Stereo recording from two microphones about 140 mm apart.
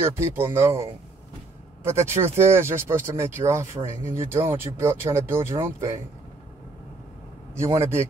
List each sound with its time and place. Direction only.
0.0 s speech: 15° right (ahead or behind)
7.5 s speech: 20° right (ahead or behind)